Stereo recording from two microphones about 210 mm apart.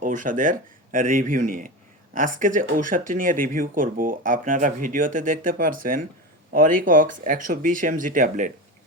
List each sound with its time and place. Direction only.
0.0 s speech: 40° right (ahead or behind)